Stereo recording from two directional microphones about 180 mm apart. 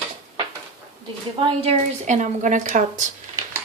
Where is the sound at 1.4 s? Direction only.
35° right (ahead or behind).